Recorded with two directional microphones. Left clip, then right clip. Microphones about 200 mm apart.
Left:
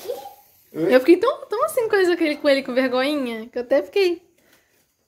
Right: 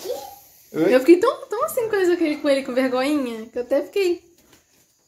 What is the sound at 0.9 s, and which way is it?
A woman's voice, 10° left (ahead or behind).